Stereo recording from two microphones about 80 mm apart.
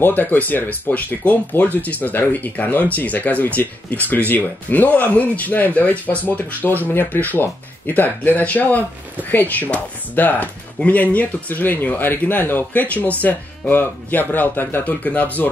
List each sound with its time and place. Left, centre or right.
0.0 s speech: left